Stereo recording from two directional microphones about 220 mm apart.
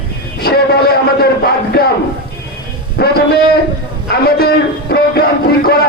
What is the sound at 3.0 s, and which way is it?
Music, 45° left (ahead or behind).